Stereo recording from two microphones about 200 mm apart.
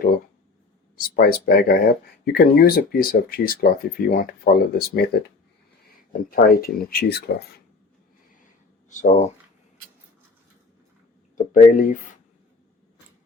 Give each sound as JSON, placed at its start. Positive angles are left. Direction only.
{"t": 0.9, "sound": "speech", "side_deg": 45}
{"t": 6.3, "sound": "speech", "side_deg": 50}
{"t": 8.9, "sound": "speech", "side_deg": 40}
{"t": 11.5, "sound": "speech", "side_deg": 40}